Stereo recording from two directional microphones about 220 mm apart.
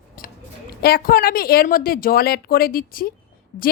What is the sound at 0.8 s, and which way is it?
A woman's voice, 40° left (ahead or behind).